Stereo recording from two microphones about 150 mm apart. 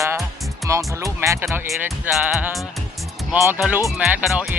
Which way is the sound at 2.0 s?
10° right (ahead or behind).